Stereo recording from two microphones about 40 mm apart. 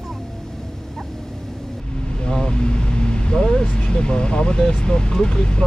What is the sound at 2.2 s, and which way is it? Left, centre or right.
Vehicle, left.